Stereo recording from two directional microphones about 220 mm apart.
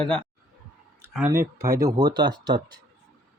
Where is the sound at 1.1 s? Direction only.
10° right (ahead or behind).